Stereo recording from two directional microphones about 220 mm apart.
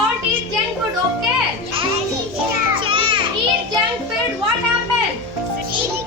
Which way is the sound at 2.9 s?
20° right (ahead or behind).